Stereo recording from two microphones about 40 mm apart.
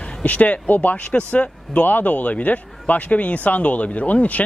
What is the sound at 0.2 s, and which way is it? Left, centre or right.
Speech, left.